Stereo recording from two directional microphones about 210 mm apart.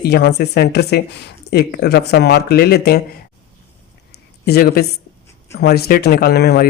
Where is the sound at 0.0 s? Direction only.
50° left (ahead or behind).